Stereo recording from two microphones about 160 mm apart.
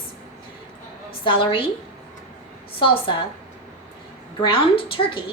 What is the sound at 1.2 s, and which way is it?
Speech, 30° left (ahead or behind).